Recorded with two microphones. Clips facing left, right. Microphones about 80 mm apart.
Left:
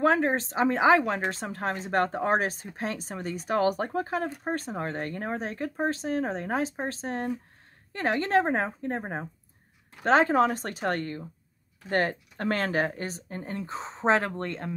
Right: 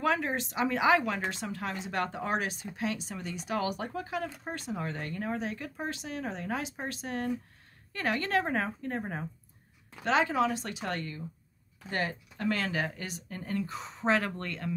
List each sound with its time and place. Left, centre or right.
0.0 s a woman's voice: left